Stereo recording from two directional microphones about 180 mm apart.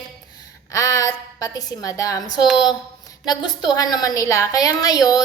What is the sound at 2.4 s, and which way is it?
Speech, centre (ahead or behind).